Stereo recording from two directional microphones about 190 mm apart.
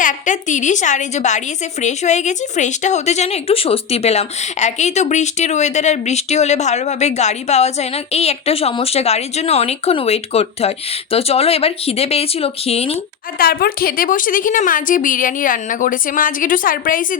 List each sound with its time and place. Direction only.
0.0 s a woman's voice: 40° left (ahead or behind)
13.4 s a woman's voice: 50° left (ahead or behind)